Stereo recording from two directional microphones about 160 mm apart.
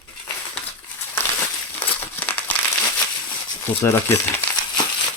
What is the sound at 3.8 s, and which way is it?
Speech, 15° left (ahead or behind).